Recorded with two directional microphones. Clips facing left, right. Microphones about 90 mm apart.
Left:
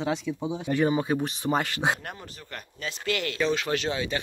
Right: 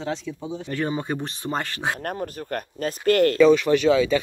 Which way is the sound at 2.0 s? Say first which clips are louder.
Right 11 dB; 50° right (ahead or behind).